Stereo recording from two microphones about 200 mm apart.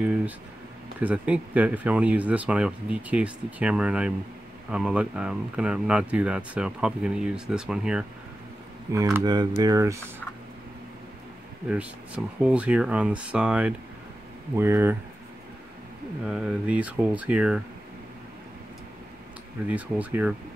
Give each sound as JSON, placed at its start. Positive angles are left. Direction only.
{"t": 0.0, "sound": "speech", "side_deg": -5}
{"t": 8.9, "sound": "speech", "side_deg": -15}
{"t": 12.4, "sound": "speech", "side_deg": -5}
{"t": 16.3, "sound": "speech", "side_deg": -5}
{"t": 19.7, "sound": "speech", "side_deg": -10}